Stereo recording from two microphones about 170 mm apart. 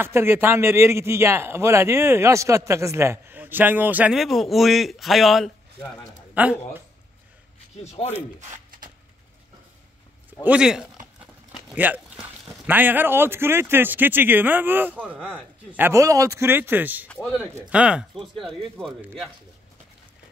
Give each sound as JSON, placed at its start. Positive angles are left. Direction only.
{"t": 0.0, "sound": "a man's voice", "side_deg": -15}
{"t": 7.8, "sound": "speech", "side_deg": 40}
{"t": 8.4, "sound": "a sound", "side_deg": -50}
{"t": 10.4, "sound": "a man's voice", "side_deg": -5}
{"t": 15.1, "sound": "speech", "side_deg": 5}
{"t": 15.7, "sound": "a man's voice", "side_deg": -15}
{"t": 17.1, "sound": "a man's voice", "side_deg": 5}
{"t": 17.6, "sound": "speech", "side_deg": -5}